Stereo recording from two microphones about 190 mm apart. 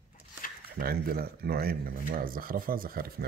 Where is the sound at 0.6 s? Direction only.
55° right (ahead or behind).